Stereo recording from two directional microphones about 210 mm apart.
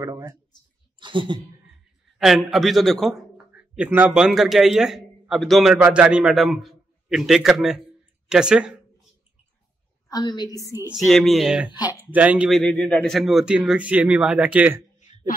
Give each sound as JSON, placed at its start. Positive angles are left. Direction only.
{"t": 0.0, "sound": "speech", "side_deg": -15}
{"t": 2.1, "sound": "a man's voice", "side_deg": 0}
{"t": 10.0, "sound": "a woman's voice", "side_deg": 20}
{"t": 10.9, "sound": "a man's voice", "side_deg": 0}
{"t": 15.1, "sound": "a sound", "side_deg": 35}